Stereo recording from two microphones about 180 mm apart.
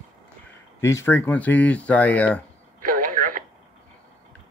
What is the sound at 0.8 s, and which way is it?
Speech, 15° left (ahead or behind).